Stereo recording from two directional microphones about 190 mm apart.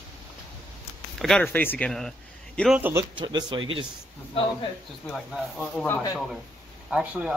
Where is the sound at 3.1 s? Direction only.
20° right (ahead or behind).